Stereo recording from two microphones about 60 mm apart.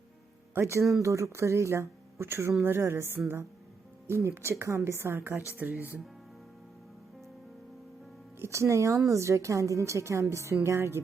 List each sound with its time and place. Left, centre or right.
0.6 s a woman's voice: right
5.5 s speech: right
8.4 s a woman's voice: right